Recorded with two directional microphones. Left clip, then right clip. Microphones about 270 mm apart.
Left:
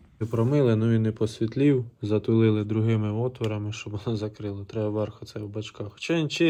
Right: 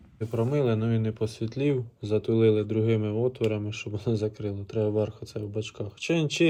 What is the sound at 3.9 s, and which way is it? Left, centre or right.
Speech, centre.